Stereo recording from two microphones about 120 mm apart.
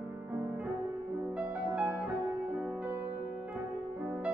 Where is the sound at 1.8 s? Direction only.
10° right (ahead or behind).